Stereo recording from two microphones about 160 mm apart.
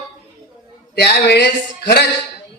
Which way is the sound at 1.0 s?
90° left.